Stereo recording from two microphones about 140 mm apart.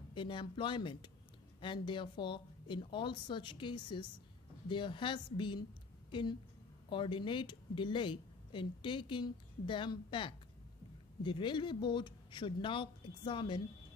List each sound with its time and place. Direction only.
0.1 s a woman's voice: 35° left (ahead or behind)
6.9 s a woman's voice: 35° left (ahead or behind)